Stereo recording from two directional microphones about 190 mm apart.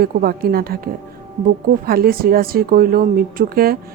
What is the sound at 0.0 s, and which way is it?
Speech, 50° right (ahead or behind).